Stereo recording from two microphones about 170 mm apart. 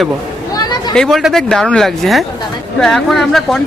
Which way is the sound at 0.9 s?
Centre (ahead or behind).